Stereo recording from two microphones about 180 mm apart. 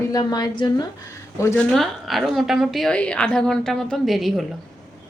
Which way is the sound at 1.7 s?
Centre (ahead or behind).